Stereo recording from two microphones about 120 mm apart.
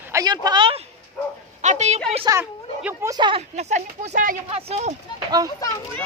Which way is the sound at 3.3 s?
65° right (ahead or behind).